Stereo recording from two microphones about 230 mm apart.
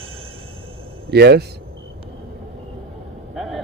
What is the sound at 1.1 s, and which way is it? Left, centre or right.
Speech, right.